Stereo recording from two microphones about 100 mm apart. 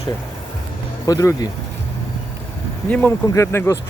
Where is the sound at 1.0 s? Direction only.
35° left (ahead or behind).